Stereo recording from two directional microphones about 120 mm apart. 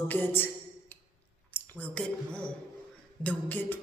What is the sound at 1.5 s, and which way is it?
A woman's voice, 10° left (ahead or behind).